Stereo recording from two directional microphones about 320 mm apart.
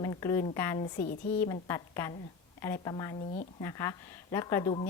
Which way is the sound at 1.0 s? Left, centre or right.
Left.